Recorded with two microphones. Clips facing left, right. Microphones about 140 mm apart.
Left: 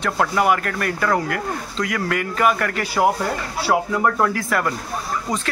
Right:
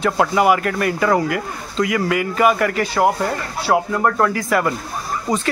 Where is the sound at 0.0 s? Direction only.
5° right (ahead or behind).